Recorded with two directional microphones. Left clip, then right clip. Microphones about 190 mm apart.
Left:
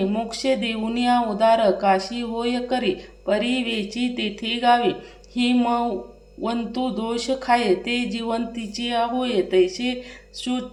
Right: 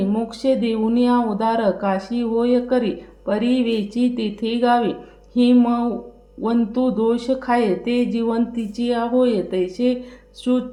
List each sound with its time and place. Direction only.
0.1 s speech: 35° right (ahead or behind)